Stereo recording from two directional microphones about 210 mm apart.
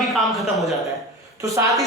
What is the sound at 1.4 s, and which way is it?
Speech, 15° right (ahead or behind).